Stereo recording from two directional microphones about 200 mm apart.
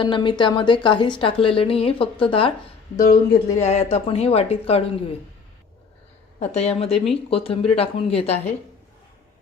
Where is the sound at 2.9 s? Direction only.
45° left (ahead or behind).